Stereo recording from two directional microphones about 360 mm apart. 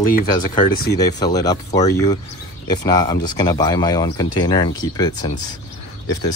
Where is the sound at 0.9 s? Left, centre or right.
Centre.